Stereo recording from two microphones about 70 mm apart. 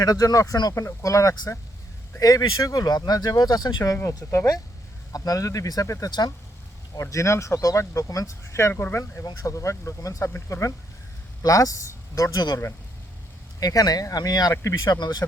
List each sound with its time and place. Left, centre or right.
0.0 s speech: left
0.8 s speech: left
4.2 s speech: left
5.1 s speech: left
6.1 s speech: left
7.0 s speech: left
8.7 s speech: left
9.4 s speech: left
10.2 s speech: left
11.4 s speech: left
13.6 s speech: left
14.5 s speech: left
14.8 s speech: left